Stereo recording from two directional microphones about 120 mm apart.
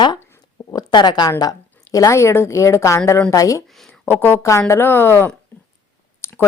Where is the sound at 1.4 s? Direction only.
30° left (ahead or behind).